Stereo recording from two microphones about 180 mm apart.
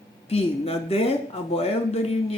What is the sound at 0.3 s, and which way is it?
Speech, 35° left (ahead or behind).